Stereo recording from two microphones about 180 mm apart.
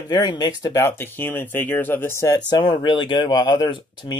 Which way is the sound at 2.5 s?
25° left (ahead or behind).